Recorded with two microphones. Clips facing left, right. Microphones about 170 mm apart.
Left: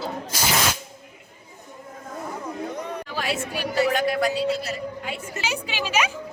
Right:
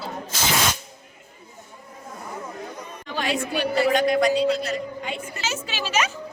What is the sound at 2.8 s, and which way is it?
Chatter, 70° left (ahead or behind).